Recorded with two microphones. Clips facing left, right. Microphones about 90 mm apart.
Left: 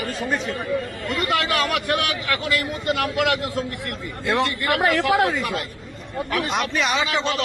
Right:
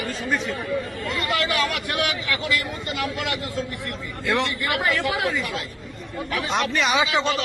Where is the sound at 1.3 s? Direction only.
55° left (ahead or behind).